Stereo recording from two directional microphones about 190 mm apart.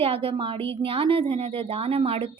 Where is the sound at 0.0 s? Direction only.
30° right (ahead or behind).